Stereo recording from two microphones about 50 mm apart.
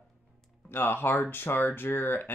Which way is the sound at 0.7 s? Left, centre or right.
Left.